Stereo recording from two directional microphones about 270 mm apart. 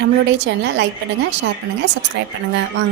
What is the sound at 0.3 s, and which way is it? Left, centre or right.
Speech, right.